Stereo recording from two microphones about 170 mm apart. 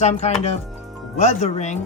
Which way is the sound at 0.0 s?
40° left (ahead or behind).